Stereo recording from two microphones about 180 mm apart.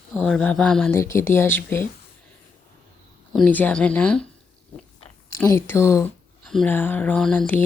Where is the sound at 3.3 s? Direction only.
10° left (ahead or behind).